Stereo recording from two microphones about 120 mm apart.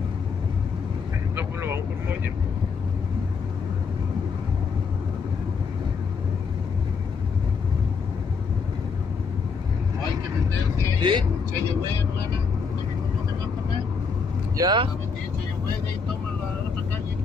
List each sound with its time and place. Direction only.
1.3 s vehicle: 20° right (ahead or behind)
11.0 s speech: 40° right (ahead or behind)
14.6 s speech: 40° right (ahead or behind)